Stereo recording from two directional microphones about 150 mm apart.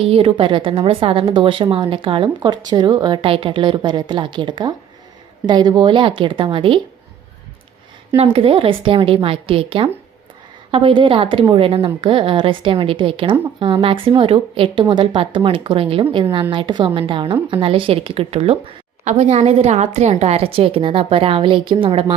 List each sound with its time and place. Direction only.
0.0 s a woman's voice: 40° right (ahead or behind)
8.1 s a woman's voice: 40° right (ahead or behind)
19.0 s a woman's voice: 50° right (ahead or behind)